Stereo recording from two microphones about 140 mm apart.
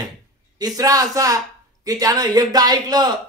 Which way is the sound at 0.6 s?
25° right (ahead or behind).